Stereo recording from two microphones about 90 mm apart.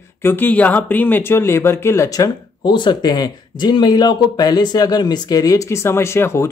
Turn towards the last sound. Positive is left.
turn(degrees=30)  # may be behind; listen again after turning